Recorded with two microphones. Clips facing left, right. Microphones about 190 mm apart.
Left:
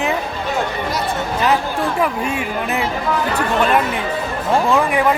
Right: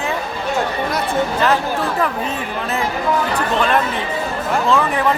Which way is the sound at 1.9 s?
10° left (ahead or behind).